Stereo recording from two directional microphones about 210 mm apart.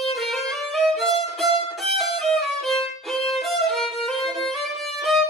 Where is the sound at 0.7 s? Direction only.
Centre (ahead or behind).